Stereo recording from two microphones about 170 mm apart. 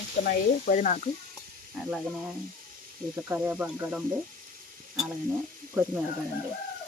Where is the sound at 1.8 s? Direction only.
5° right (ahead or behind).